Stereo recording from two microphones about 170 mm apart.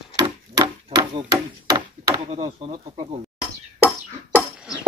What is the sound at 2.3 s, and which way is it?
Speech, 35° right (ahead or behind).